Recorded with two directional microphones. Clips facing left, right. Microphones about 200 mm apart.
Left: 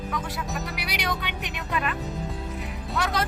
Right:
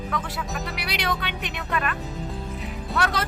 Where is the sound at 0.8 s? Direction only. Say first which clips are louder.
Right 4 dB; 10° left (ahead or behind).